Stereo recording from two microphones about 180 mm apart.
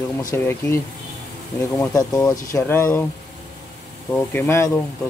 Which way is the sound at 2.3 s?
15° left (ahead or behind).